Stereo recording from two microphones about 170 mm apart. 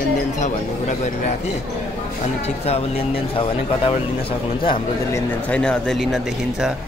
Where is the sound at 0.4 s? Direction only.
45° left (ahead or behind).